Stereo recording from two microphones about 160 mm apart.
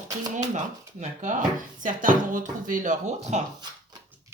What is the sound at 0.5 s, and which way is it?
Speech, 50° right (ahead or behind).